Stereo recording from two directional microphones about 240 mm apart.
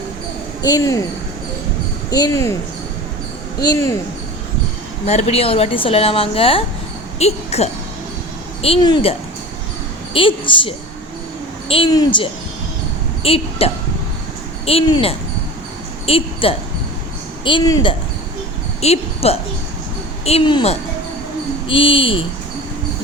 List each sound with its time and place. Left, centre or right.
0.6 s speech: centre
2.0 s speech: centre
3.6 s speech: centre
5.0 s speech: left
10.2 s speech: left